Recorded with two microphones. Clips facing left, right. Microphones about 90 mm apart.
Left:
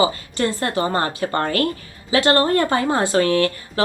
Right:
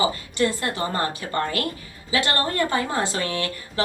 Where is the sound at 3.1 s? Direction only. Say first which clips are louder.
Left 10 dB; 50° left (ahead or behind).